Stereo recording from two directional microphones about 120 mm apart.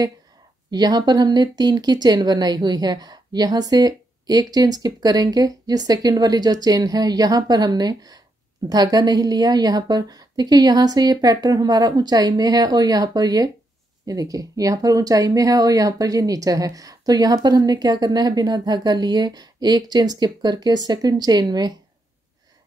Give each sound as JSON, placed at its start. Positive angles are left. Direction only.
{"t": 0.7, "sound": "speech", "side_deg": -35}